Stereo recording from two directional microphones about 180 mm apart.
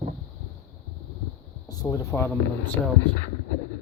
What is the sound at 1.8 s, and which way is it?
Speech, 15° left (ahead or behind).